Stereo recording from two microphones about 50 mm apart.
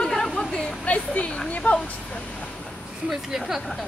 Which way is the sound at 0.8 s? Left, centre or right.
Left.